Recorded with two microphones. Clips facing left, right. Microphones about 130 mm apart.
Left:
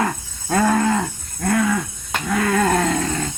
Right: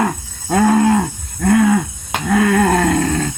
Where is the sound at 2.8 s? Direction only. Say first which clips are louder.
Right 5 dB; 50° right (ahead or behind).